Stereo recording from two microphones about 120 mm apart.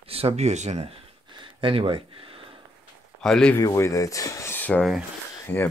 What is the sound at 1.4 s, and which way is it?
Speech, 50° right (ahead or behind).